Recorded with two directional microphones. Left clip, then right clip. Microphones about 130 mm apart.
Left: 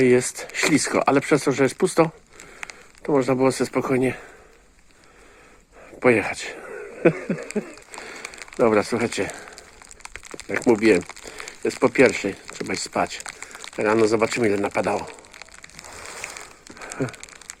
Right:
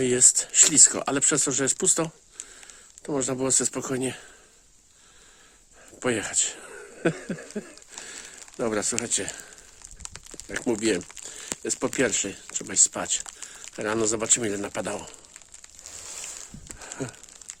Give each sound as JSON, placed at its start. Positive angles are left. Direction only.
{"t": 0.0, "sound": "speech", "side_deg": -25}
{"t": 3.2, "sound": "speech", "side_deg": -25}
{"t": 6.0, "sound": "speech", "side_deg": -25}
{"t": 6.6, "sound": "speech", "side_deg": -35}
{"t": 8.0, "sound": "a sound", "side_deg": -30}
{"t": 11.3, "sound": "speech", "side_deg": -30}
{"t": 14.2, "sound": "speech", "side_deg": -45}
{"t": 16.8, "sound": "crumpling", "side_deg": -40}